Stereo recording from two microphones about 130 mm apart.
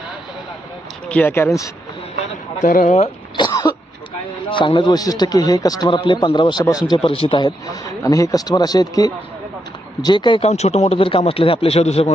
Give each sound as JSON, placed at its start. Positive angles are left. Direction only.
{"t": 1.0, "sound": "speech", "side_deg": 10}
{"t": 2.6, "sound": "speech", "side_deg": 80}
{"t": 3.3, "sound": "throat clearing", "side_deg": 35}
{"t": 4.4, "sound": "a man's voice", "side_deg": 40}
{"t": 10.4, "sound": "a man's voice", "side_deg": 55}